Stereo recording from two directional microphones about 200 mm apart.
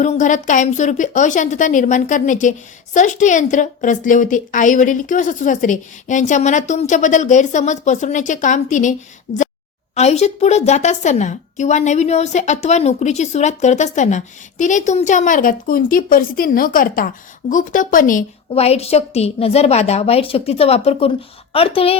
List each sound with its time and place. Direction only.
0.0 s a woman's voice: 35° left (ahead or behind)
9.3 s speech: 65° left (ahead or behind)
9.9 s a woman's voice: 35° left (ahead or behind)